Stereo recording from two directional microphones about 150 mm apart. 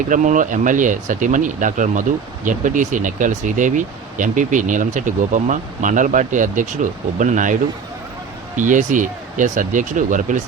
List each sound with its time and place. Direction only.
0.1 s speech: 55° right (ahead or behind)
8.5 s speech: 60° right (ahead or behind)